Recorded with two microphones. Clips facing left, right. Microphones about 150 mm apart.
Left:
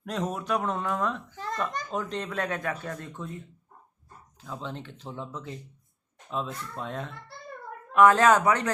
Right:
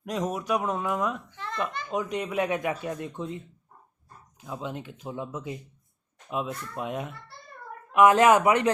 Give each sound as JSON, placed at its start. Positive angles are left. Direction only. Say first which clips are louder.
{"t": 0.0, "sound": "speech", "louder": "right 2 dB", "side_deg": -10}
{"t": 1.4, "sound": "a child's voice", "louder": "left 2 dB", "side_deg": 40}
{"t": 1.9, "sound": "speech", "louder": "right 3 dB", "side_deg": -5}